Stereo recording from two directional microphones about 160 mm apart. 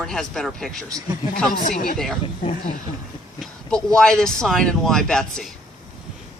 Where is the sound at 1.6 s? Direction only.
55° left (ahead or behind).